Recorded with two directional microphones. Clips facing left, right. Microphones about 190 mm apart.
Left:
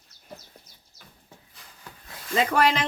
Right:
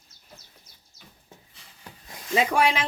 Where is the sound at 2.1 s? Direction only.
10° right (ahead or behind).